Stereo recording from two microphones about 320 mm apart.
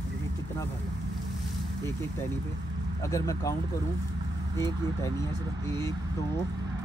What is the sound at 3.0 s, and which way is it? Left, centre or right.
Speech, centre.